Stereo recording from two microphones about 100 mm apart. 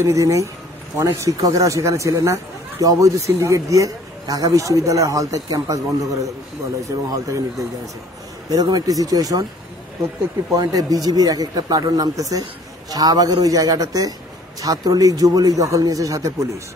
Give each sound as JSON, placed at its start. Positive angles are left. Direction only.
{"t": 0.0, "sound": "speech", "side_deg": -30}
{"t": 10.5, "sound": "speech", "side_deg": -40}